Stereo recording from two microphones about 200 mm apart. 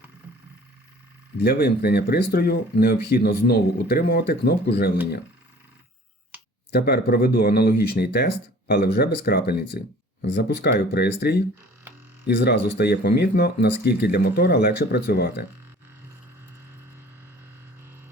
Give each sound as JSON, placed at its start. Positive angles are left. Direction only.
{"t": 1.4, "sound": "speech", "side_deg": 50}
{"t": 6.7, "sound": "speech", "side_deg": 50}